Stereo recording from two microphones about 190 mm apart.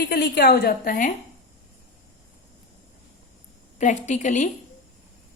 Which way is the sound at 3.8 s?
40° left (ahead or behind).